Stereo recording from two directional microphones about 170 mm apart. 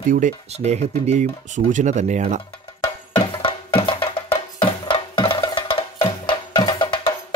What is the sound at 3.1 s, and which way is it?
Music, 30° left (ahead or behind).